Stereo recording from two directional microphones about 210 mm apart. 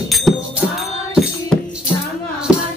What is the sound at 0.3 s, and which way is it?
Music, centre (ahead or behind).